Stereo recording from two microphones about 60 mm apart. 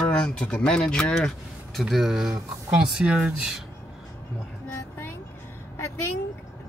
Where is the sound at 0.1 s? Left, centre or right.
Centre.